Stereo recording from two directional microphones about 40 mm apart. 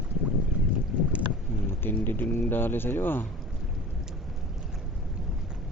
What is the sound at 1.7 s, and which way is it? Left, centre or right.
Speech, left.